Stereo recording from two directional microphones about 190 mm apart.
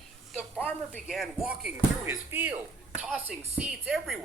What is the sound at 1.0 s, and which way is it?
Speech, centre (ahead or behind).